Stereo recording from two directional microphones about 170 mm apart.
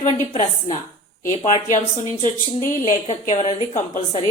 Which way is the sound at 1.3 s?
45° left (ahead or behind).